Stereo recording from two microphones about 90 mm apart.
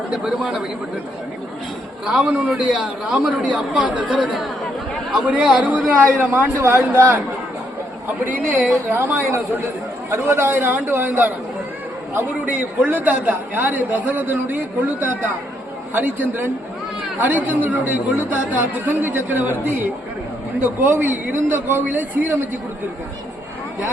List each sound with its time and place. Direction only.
0.1 s speech: 5° right (ahead or behind)
2.0 s a man's voice: 10° right (ahead or behind); by 7.2 s 25° right (ahead or behind)
8.9 s speech: 25° right (ahead or behind)